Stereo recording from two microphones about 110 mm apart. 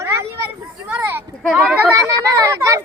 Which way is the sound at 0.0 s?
25° right (ahead or behind).